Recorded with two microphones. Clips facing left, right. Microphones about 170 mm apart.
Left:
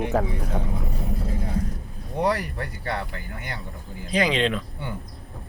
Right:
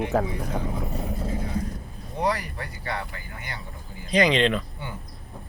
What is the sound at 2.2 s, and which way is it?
Speech, 60° left (ahead or behind).